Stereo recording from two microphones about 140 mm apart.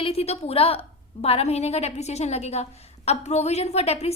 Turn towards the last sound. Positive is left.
turn(degrees=50)  # may be behind; listen again after turning